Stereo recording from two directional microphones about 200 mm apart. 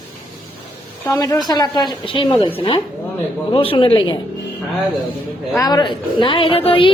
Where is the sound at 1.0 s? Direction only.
15° left (ahead or behind).